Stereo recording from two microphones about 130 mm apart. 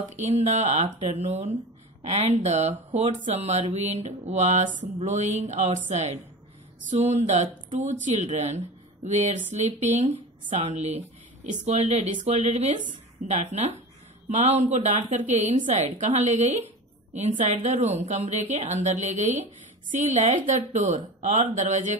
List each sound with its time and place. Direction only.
0.1 s a woman's voice: 60° right (ahead or behind)